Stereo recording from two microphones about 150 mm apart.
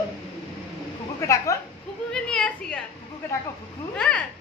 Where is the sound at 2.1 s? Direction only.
5° left (ahead or behind).